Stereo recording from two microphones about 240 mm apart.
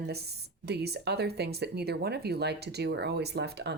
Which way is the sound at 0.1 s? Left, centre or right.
Right.